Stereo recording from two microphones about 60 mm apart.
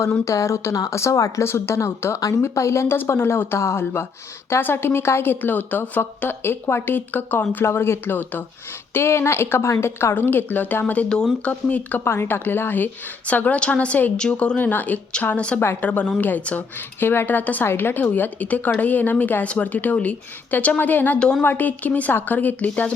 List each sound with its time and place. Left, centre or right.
0.3 s speech: left
3.0 s speech: left
8.9 s a woman's voice: left
12.0 s speech: left
13.2 s a woman's voice: left
15.4 s a woman's voice: centre
17.0 s a woman's voice: left